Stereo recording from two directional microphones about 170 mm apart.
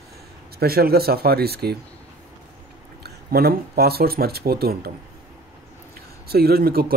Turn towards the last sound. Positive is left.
turn(degrees=-65)  # may be behind; listen again after turning